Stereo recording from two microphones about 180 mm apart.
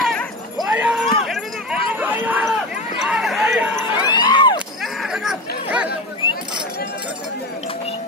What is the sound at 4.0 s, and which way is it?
Crowd, 25° left (ahead or behind).